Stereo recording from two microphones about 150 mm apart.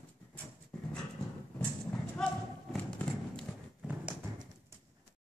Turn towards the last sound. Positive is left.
turn(degrees=-10)  # may be behind; listen again after turning